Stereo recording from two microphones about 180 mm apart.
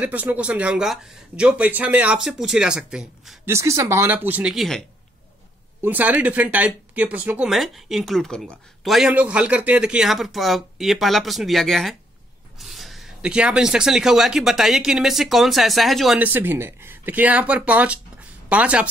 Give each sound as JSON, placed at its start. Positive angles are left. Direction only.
{"t": 0.0, "sound": "speech", "side_deg": -10}
{"t": 3.4, "sound": "speech", "side_deg": -15}
{"t": 5.8, "sound": "speech", "side_deg": -10}